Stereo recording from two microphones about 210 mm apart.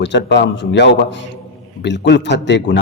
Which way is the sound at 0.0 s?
55° left (ahead or behind).